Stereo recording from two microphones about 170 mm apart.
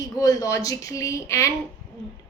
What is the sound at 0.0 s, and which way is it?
A woman's voice, 20° left (ahead or behind).